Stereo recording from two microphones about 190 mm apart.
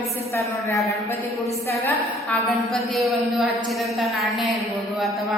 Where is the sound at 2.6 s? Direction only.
Centre (ahead or behind).